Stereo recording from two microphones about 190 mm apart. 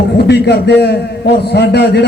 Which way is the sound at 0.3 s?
60° left (ahead or behind).